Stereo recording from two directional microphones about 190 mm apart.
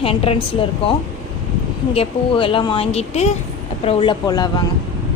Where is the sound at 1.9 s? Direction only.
30° left (ahead or behind).